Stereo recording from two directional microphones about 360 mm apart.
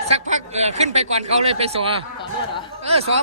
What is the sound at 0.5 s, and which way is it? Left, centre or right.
A man's voice, centre.